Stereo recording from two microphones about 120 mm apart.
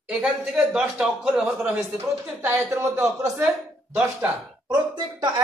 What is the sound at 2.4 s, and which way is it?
Speech, 20° right (ahead or behind).